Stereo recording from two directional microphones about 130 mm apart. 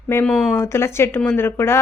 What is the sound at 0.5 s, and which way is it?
Speech, 20° left (ahead or behind).